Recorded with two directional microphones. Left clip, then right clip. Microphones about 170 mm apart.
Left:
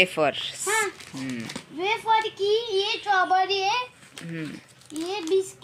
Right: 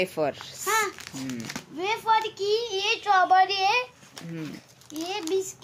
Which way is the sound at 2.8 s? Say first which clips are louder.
Right 1 dB; 15° right (ahead or behind).